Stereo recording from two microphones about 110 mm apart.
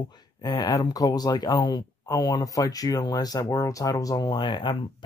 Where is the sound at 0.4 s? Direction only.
35° left (ahead or behind).